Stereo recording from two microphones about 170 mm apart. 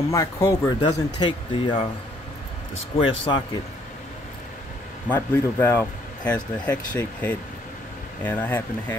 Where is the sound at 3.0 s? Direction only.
25° left (ahead or behind).